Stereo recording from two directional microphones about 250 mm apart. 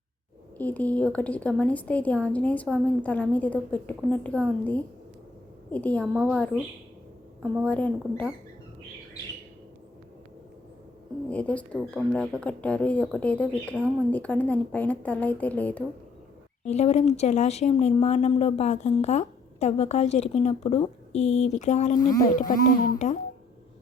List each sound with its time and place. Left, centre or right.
0.6 s speech: centre
11.3 s speech: centre
16.6 s a woman's voice: left